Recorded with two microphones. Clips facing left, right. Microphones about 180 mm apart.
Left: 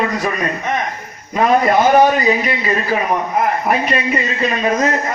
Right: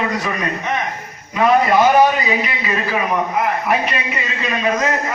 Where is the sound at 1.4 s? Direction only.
40° left (ahead or behind).